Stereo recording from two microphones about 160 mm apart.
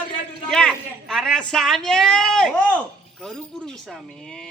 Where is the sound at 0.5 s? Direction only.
Centre (ahead or behind).